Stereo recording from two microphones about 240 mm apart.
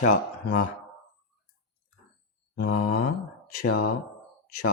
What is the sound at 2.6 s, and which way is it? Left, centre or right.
Mantra, left.